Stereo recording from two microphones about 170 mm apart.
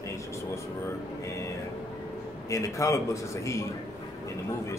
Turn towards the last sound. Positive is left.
turn(degrees=20)  # may be behind; listen again after turning